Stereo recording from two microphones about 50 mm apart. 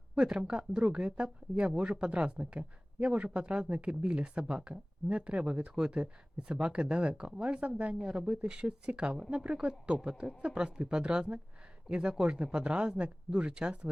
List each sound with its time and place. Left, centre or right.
0.2 s speech: centre